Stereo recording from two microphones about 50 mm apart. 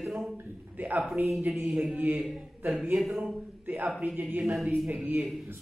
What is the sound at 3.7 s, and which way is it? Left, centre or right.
Speech, right.